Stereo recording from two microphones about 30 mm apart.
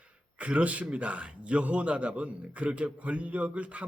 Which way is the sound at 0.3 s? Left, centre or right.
Right.